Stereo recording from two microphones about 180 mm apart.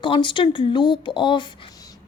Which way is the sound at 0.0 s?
25° left (ahead or behind).